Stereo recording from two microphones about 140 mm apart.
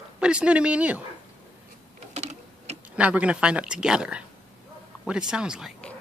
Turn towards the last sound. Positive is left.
turn(degrees=-5)  # may be behind; listen again after turning